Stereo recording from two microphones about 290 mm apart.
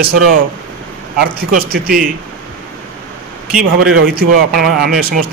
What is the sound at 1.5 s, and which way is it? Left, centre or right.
Speech, right.